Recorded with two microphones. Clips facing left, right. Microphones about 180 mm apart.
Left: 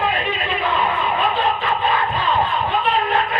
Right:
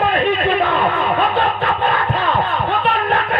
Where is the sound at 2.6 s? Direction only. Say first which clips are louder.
Right 2 dB; 60° right (ahead or behind).